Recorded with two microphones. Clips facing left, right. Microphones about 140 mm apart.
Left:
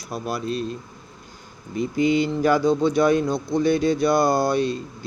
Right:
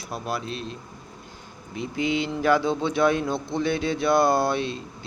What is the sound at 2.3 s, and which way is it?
Speech, centre (ahead or behind).